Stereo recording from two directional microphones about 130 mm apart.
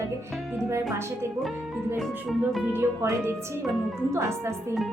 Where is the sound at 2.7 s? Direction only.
20° right (ahead or behind).